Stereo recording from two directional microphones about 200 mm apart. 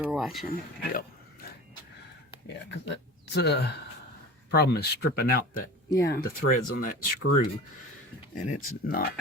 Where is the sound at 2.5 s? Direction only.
60° left (ahead or behind).